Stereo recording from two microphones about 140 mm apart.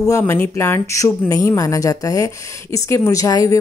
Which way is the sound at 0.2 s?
15° left (ahead or behind).